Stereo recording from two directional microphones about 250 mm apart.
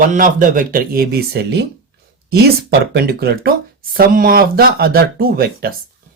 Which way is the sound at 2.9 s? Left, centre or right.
Right.